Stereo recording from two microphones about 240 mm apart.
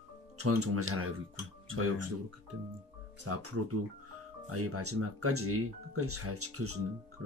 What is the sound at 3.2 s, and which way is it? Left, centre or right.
Speech, right.